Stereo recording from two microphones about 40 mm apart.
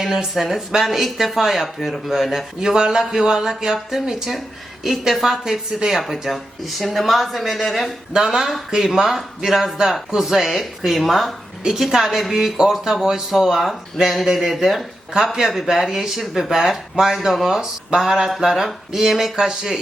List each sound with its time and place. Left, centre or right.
0.0 s speech: centre
8.1 s speech: centre
15.1 s speech: centre
19.5 s speech: centre